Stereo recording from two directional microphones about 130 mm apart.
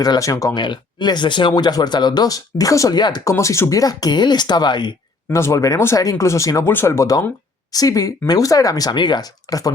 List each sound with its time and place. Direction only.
0.0 s speech: 25° left (ahead or behind)
3.3 s speech: 20° left (ahead or behind)
5.3 s speech: 25° left (ahead or behind)